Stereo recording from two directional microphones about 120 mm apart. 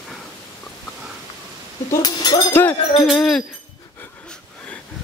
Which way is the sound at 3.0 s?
5° left (ahead or behind).